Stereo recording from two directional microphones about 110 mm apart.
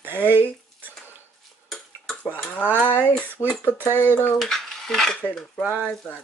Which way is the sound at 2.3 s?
15° left (ahead or behind).